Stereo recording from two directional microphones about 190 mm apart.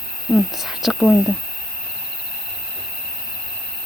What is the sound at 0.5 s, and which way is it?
Speech, centre (ahead or behind).